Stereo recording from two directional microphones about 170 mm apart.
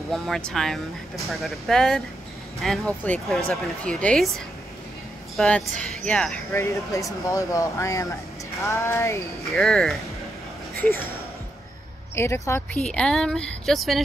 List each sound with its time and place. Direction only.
0.1 s speech: centre (ahead or behind)
5.4 s speech: 5° left (ahead or behind)
6.5 s speech: 15° left (ahead or behind)
9.6 s speech: 5° left (ahead or behind)
12.2 s speech: 15° left (ahead or behind)